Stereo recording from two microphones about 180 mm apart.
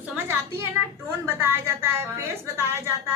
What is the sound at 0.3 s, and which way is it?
A woman's voice, 15° right (ahead or behind).